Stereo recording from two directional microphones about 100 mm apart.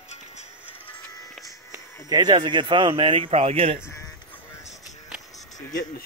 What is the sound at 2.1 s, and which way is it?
Speech, 45° right (ahead or behind).